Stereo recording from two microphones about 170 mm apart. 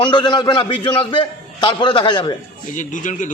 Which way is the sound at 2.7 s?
50° left (ahead or behind).